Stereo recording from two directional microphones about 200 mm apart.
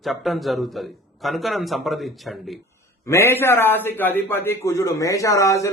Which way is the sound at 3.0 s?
15° left (ahead or behind).